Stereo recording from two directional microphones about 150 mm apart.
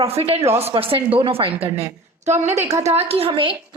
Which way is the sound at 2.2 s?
50° right (ahead or behind).